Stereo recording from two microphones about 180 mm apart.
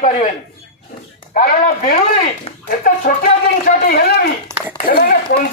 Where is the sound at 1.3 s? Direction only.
50° left (ahead or behind).